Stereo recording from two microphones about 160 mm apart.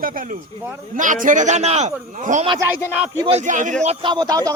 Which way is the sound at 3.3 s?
50° right (ahead or behind).